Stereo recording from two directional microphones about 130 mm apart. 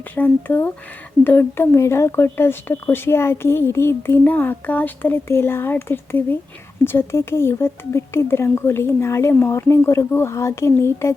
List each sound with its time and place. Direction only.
0.2 s speech: 15° left (ahead or behind)